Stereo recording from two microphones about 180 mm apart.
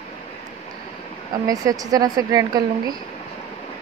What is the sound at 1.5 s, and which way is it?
A woman's voice, 20° right (ahead or behind).